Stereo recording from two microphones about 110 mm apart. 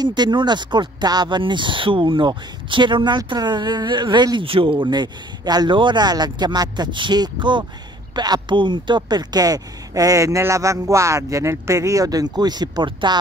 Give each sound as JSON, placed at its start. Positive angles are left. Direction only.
{"t": 0.0, "sound": "speech", "side_deg": -40}
{"t": 4.5, "sound": "speech", "side_deg": -55}
{"t": 4.7, "sound": "speech", "side_deg": -40}